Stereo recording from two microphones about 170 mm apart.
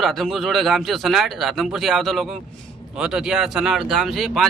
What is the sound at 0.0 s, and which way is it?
Speech, centre (ahead or behind).